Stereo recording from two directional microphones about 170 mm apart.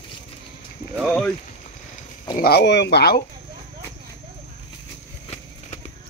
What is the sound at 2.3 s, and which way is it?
Speech, 65° left (ahead or behind).